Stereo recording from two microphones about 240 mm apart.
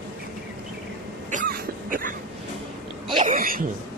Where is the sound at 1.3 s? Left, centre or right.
Right.